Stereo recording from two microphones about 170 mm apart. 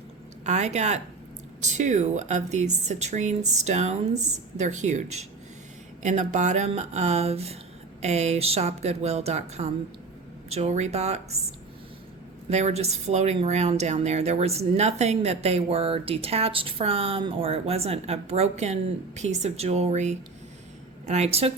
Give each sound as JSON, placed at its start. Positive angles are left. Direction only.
{"t": 0.4, "sound": "a woman's voice", "side_deg": -40}
{"t": 12.5, "sound": "a woman's voice", "side_deg": -40}